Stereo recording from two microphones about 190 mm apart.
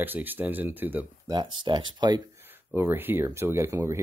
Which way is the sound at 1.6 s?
25° right (ahead or behind).